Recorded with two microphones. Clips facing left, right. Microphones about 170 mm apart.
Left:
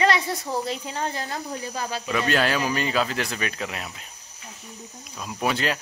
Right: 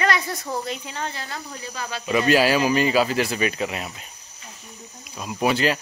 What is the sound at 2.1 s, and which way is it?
Speech, 5° right (ahead or behind).